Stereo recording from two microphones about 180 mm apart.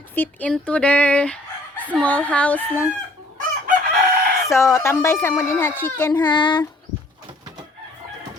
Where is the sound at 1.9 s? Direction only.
5° left (ahead or behind).